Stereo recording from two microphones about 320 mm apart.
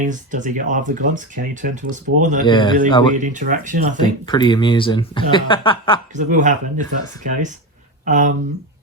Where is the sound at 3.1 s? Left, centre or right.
Right.